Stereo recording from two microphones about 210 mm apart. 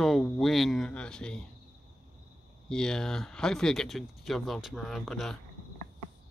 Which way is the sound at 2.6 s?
5° left (ahead or behind).